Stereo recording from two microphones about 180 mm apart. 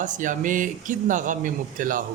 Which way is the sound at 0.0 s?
45° right (ahead or behind).